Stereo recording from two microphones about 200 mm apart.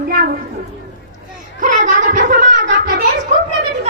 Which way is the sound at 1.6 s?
40° right (ahead or behind).